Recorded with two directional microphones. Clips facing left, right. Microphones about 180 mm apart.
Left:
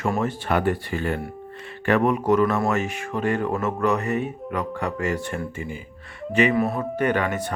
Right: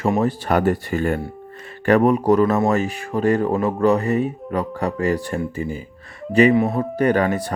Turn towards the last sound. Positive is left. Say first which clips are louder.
# right 5 dB
turn(degrees=-35)  # may be behind; listen again after turning